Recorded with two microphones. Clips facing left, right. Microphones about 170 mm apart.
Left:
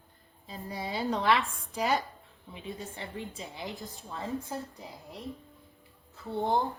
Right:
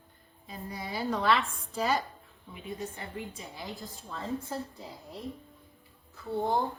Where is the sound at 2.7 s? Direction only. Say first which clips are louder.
Right 5 dB; 25° left (ahead or behind).